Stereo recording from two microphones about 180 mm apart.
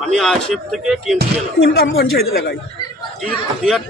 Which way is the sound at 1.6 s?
60° left (ahead or behind).